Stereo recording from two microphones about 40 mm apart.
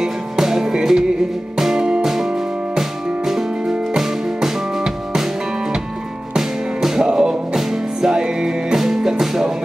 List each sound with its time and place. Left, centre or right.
0.0 s music: centre
2.0 s music: centre
6.3 s music: centre
8.7 s music: centre